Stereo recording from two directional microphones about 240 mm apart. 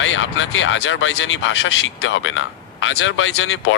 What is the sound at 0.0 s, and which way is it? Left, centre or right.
Speech, left.